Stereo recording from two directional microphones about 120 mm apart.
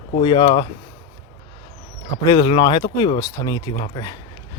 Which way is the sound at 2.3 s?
45° left (ahead or behind).